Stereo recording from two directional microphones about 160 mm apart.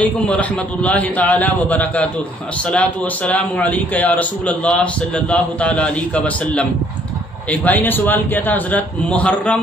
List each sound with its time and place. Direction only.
0.0 s a man's voice: 10° left (ahead or behind)